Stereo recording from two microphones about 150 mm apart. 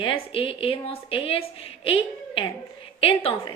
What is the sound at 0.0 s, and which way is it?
A woman's voice, 35° left (ahead or behind).